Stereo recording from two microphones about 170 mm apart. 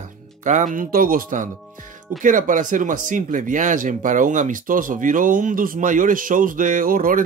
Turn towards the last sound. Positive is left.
turn(degrees=-55)  # may be behind; listen again after turning